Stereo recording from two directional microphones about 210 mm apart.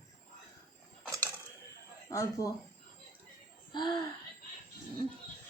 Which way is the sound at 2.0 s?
15° left (ahead or behind).